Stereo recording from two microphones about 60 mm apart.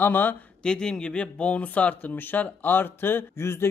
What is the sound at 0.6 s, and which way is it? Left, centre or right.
Speech, centre.